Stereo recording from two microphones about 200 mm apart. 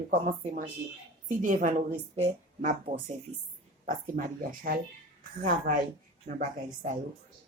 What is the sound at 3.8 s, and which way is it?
Speech, 45° right (ahead or behind).